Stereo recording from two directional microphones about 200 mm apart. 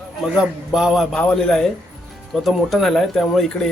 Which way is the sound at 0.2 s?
5° right (ahead or behind).